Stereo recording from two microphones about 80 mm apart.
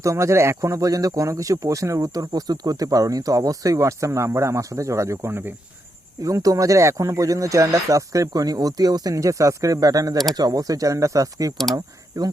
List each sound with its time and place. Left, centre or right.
0.0 s speech: right
6.2 s speech: right
9.1 s speech: right